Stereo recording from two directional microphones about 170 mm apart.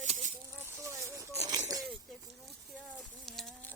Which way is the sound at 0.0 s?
45° right (ahead or behind).